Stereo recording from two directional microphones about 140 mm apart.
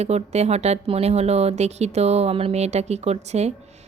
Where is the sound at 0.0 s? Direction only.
50° right (ahead or behind).